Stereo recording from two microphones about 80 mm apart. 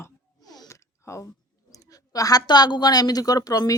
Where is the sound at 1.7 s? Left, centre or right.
Left.